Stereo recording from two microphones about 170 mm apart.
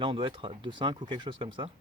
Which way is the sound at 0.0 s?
30° right (ahead or behind).